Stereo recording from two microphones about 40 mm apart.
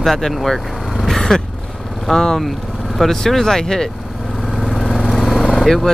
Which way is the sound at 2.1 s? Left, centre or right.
Centre.